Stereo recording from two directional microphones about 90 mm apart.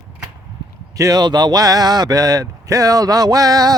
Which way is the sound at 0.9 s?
40° right (ahead or behind).